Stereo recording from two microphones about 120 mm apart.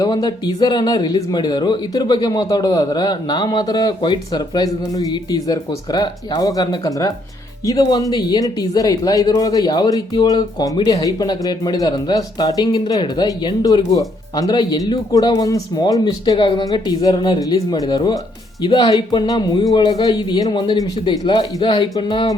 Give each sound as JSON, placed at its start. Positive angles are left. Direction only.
{"t": 0.0, "sound": "speech", "side_deg": 40}